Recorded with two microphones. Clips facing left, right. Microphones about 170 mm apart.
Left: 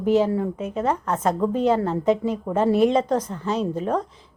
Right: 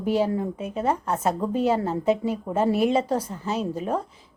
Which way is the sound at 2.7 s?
25° left (ahead or behind).